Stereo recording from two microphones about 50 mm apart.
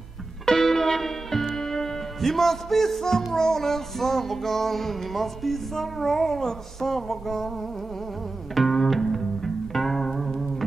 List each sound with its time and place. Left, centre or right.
0.5 s music: centre
8.5 s music: centre